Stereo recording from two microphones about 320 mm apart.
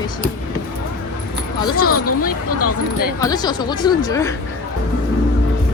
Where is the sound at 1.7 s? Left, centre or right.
Left.